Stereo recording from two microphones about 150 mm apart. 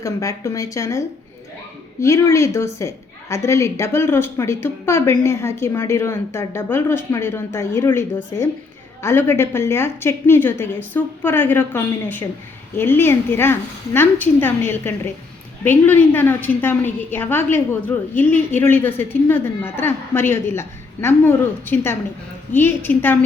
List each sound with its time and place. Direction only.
0.0 s speech: 20° left (ahead or behind)